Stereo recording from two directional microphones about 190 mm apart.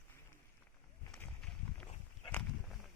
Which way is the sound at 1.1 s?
5° left (ahead or behind).